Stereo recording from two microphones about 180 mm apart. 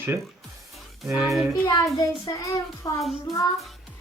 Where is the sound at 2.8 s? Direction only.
20° left (ahead or behind).